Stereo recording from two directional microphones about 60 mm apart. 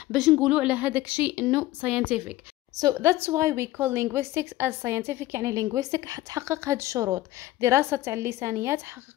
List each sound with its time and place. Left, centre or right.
0.4 s a woman's voice: centre
2.8 s a woman's voice: right
5.5 s a woman's voice: right
6.4 s a woman's voice: right